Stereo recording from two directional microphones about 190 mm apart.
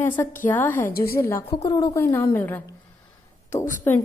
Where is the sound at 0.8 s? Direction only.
50° left (ahead or behind).